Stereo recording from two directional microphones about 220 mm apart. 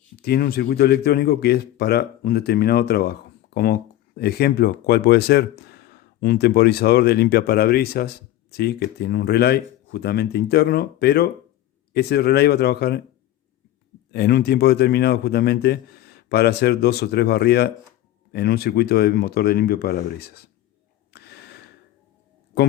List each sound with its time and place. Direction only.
0.2 s speech: 45° left (ahead or behind)
14.1 s speech: 45° left (ahead or behind)
21.1 s gasp: 50° left (ahead or behind)
22.5 s speech: 45° left (ahead or behind)